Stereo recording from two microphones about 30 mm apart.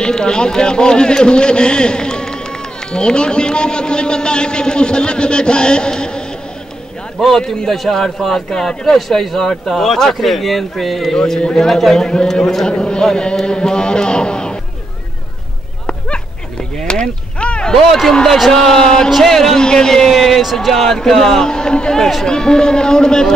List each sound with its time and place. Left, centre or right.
0.0 s a man's voice: left
7.2 s a man's voice: centre
8.9 s a man's voice: centre
11.3 s a man's voice: left
11.6 s a man's voice: centre
12.6 s a man's voice: left
17.0 s a sound: left
17.8 s speech: centre
18.5 s a man's voice: centre
19.0 s speech: centre
19.3 s a man's voice: centre
19.6 s a man's voice: left
20.1 s a man's voice: centre
21.5 s a man's voice: left